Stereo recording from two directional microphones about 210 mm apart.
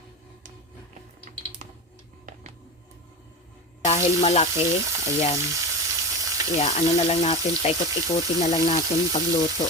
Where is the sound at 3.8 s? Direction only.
30° left (ahead or behind).